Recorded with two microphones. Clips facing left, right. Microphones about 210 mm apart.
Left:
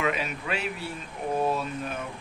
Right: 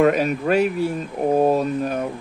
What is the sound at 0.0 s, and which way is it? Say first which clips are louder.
Speech: right 12 dB; 45° right (ahead or behind).